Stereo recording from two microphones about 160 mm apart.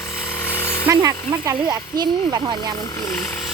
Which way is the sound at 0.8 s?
20° right (ahead or behind).